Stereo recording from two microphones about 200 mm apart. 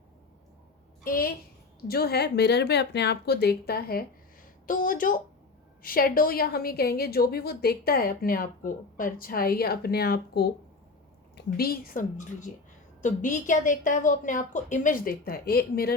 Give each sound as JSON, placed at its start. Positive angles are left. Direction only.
{"t": 1.0, "sound": "a woman's voice", "side_deg": 45}